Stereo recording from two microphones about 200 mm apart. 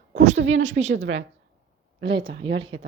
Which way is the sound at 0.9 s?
65° right (ahead or behind).